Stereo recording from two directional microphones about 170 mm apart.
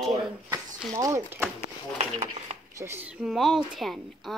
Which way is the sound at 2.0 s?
40° right (ahead or behind).